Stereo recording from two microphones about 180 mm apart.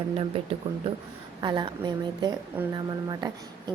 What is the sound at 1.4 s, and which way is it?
A woman's voice, 25° right (ahead or behind).